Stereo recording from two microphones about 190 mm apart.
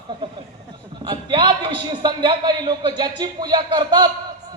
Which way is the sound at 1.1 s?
25° right (ahead or behind).